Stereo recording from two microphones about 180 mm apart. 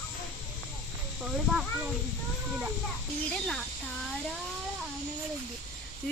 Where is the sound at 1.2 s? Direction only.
5° right (ahead or behind).